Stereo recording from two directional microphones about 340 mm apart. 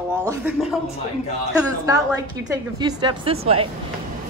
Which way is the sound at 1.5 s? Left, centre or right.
Centre.